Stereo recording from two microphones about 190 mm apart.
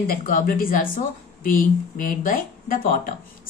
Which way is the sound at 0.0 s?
50° left (ahead or behind).